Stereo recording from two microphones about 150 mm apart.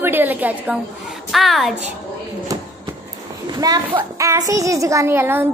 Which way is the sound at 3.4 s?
25° right (ahead or behind).